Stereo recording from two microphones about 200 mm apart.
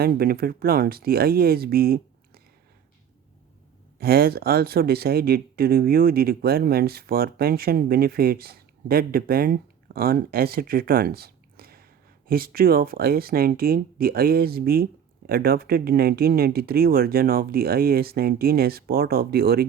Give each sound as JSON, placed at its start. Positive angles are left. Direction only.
{"t": 0.0, "sound": "speech", "side_deg": -50}
{"t": 3.9, "sound": "speech", "side_deg": -50}